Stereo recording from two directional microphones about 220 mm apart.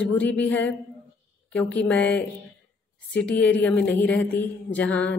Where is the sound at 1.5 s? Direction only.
5° left (ahead or behind).